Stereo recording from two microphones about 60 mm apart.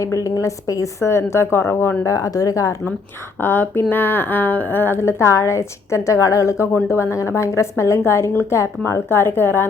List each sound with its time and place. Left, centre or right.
0.0 s a woman's voice: left
2.0 s speech: left
3.4 s a woman's voice: left
9.0 s speech: left